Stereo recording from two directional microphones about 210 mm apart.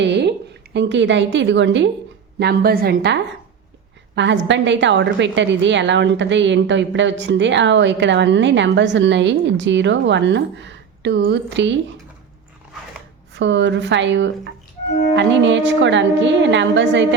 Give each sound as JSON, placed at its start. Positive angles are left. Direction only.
{"t": 0.0, "sound": "a woman's voice", "side_deg": -55}
{"t": 2.4, "sound": "a woman's voice", "side_deg": -45}
{"t": 13.3, "sound": "a woman's voice", "side_deg": -60}